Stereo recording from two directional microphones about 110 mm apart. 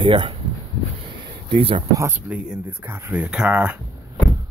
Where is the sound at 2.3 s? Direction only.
15° right (ahead or behind).